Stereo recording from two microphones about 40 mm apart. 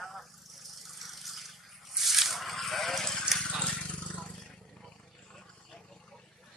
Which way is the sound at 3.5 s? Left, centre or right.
Left.